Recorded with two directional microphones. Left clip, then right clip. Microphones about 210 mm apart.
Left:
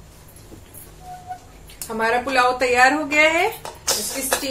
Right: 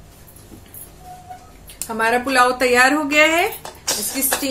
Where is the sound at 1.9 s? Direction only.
55° right (ahead or behind).